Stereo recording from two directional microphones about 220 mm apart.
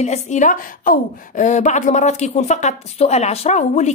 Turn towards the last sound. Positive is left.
turn(degrees=30)  # may be behind; listen again after turning